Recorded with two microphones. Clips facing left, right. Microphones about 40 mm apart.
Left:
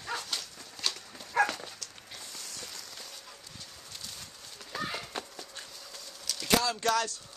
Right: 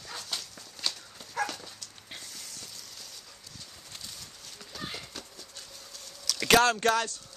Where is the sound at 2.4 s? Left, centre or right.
Left.